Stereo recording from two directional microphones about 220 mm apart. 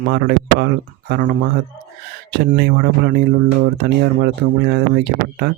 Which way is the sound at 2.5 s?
50° right (ahead or behind).